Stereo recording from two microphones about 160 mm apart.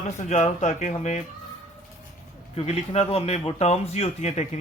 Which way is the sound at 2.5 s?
40° left (ahead or behind).